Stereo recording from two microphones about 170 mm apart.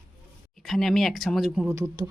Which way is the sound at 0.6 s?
Centre (ahead or behind).